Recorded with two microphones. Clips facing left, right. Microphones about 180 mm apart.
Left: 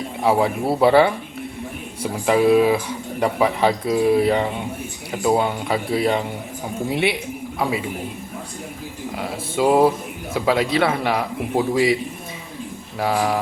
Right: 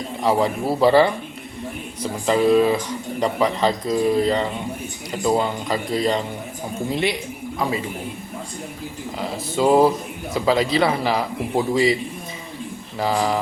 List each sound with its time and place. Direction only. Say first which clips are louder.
0.2 s a man's voice: left 1 dB; 5° left (ahead or behind)
2.2 s speech: left 1 dB; 10° left (ahead or behind)
6.9 s a woman's voice: left 2 dB; 65° left (ahead or behind)
7.6 s a man's voice: left 1 dB; 5° left (ahead or behind)
9.1 s a man's voice: even; centre (ahead or behind)
13.0 s a man's voice: even; centre (ahead or behind)